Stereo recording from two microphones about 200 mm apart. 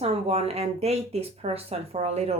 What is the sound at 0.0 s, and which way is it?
Speech, 30° right (ahead or behind).